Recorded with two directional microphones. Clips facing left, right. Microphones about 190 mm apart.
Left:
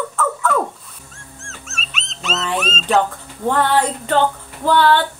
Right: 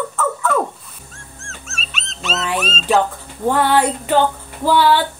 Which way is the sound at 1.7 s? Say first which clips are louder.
Right 1 dB; 35° right (ahead or behind).